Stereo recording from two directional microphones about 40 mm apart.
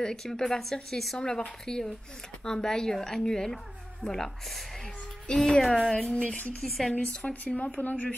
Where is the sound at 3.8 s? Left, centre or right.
Centre.